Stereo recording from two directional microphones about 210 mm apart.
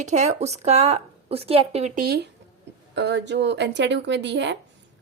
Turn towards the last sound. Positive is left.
turn(degrees=-55)  # may be behind; listen again after turning